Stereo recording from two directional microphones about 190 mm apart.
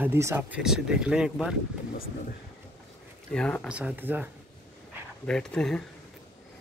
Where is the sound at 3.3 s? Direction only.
5° left (ahead or behind).